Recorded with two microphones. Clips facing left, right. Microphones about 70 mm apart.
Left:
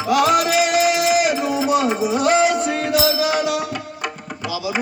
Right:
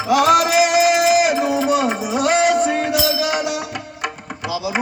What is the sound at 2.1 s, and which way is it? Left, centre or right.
Music, centre.